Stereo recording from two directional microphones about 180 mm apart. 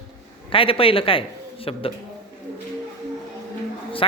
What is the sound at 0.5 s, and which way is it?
A man's voice, 30° left (ahead or behind).